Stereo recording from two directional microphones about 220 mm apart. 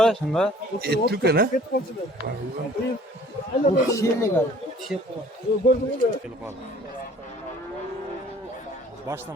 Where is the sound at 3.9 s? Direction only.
15° left (ahead or behind).